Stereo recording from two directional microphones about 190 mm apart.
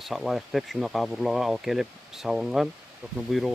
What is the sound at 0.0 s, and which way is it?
Speech, centre (ahead or behind).